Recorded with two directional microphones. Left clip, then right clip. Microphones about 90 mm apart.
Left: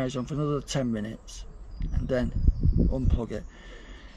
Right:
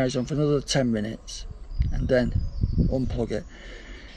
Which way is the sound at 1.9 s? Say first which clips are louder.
Right 6 dB; 30° left (ahead or behind).